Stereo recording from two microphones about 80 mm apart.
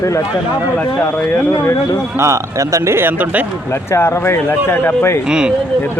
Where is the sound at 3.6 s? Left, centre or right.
Left.